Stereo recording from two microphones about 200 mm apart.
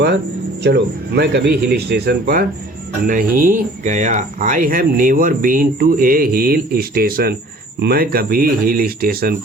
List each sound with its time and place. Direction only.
0.6 s speech: 55° right (ahead or behind)